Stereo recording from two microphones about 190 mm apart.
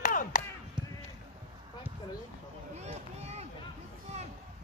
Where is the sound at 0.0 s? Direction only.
45° left (ahead or behind).